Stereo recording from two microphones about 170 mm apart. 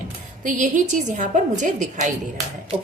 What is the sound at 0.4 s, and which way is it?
A woman's voice, 50° right (ahead or behind).